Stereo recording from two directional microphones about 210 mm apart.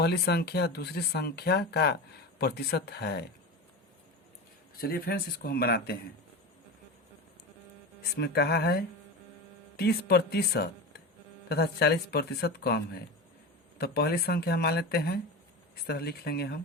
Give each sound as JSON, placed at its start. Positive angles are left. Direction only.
{"t": 0.0, "sound": "speech", "side_deg": 50}
{"t": 4.8, "sound": "speech", "side_deg": 45}
{"t": 8.0, "sound": "speech", "side_deg": 50}